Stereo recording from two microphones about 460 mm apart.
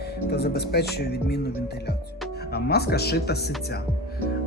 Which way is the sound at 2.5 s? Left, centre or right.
Left.